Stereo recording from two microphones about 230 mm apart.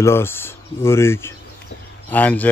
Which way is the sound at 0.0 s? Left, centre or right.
Centre.